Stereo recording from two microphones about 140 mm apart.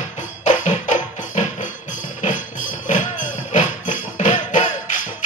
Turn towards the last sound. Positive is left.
turn(degrees=60)  # may be behind; listen again after turning